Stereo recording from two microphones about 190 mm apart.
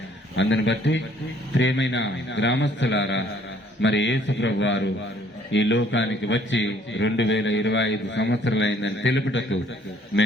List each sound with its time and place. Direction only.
0.3 s a man's voice: 75° left (ahead or behind)
10.1 s a man's voice: 60° left (ahead or behind)